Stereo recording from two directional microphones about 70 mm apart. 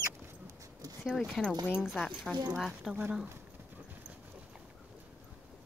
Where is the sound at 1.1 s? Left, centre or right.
Centre.